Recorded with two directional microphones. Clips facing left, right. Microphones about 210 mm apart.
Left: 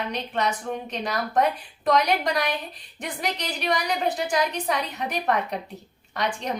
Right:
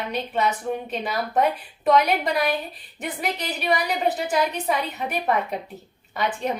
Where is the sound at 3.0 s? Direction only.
5° right (ahead or behind).